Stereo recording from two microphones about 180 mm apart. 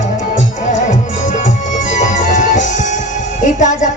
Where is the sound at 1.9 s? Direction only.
45° left (ahead or behind).